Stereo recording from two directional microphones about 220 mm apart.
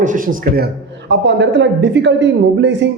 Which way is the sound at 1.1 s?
55° right (ahead or behind).